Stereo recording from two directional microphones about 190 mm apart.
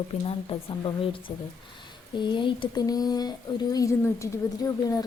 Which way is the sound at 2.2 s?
25° left (ahead or behind).